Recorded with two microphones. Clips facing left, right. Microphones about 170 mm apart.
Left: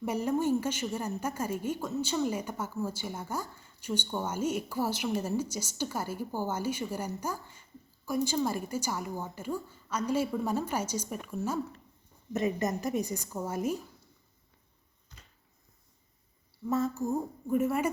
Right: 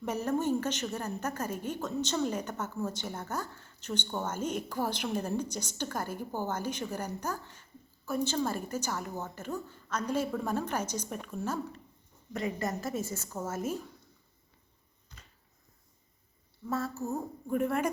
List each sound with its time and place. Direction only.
0.0 s a woman's voice: 10° left (ahead or behind)
12.3 s a woman's voice: 20° left (ahead or behind)
16.6 s a woman's voice: 20° left (ahead or behind)